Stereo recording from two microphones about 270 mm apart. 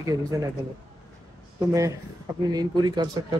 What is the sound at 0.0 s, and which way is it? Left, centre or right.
Speech, centre.